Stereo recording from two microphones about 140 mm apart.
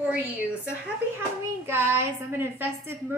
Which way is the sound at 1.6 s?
15° right (ahead or behind).